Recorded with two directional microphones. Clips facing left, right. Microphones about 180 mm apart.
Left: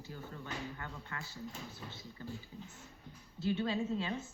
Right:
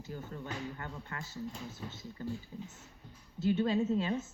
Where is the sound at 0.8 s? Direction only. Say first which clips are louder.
Right 2 dB; 45° right (ahead or behind).